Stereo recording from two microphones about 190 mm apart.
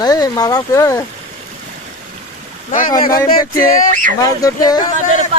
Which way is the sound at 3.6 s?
45° left (ahead or behind).